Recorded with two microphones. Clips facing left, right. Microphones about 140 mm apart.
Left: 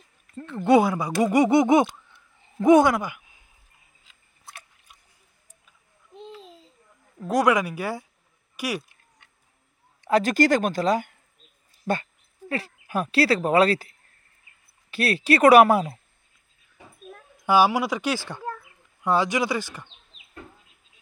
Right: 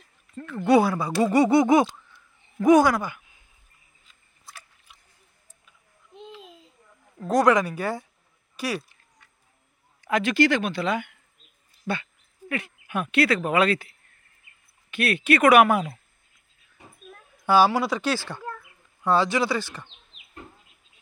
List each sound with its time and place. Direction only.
0.3 s speech: 20° left (ahead or behind)
6.1 s babbling: 35° left (ahead or behind)
7.2 s speech: 10° left (ahead or behind)
10.0 s speech: 35° left (ahead or behind)
12.5 s speech: 35° left (ahead or behind)
17.4 s speech: 15° left (ahead or behind)